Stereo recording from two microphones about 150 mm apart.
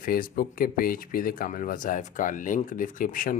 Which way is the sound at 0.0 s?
70° left (ahead or behind).